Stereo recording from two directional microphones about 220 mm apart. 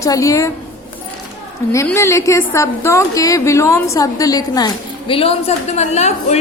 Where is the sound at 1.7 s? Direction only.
15° left (ahead or behind); by 6.4 s 30° left (ahead or behind).